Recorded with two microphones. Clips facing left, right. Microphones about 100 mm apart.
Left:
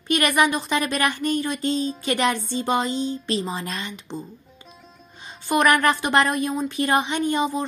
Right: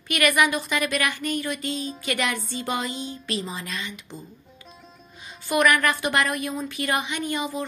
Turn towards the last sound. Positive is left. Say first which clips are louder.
# left 5 dB
turn(degrees=30)  # may be behind; listen again after turning